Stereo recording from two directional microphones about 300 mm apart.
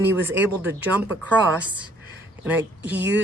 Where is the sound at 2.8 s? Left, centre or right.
Right.